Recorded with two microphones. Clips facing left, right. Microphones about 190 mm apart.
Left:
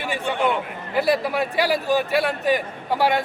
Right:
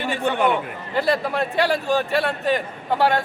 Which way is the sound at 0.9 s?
5° left (ahead or behind).